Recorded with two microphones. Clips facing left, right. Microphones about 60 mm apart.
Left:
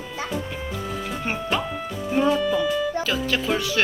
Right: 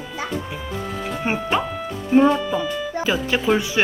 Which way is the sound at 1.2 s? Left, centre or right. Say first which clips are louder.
Right 4 dB; centre.